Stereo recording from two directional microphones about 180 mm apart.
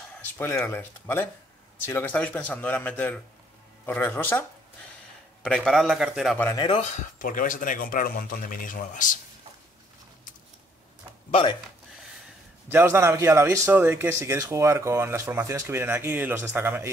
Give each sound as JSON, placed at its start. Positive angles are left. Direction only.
{"t": 0.2, "sound": "a man's voice", "side_deg": 10}
{"t": 6.3, "sound": "speech", "side_deg": 10}
{"t": 6.6, "sound": "speech", "side_deg": 30}
{"t": 7.2, "sound": "speech", "side_deg": 50}
{"t": 12.6, "sound": "a man's voice", "side_deg": -15}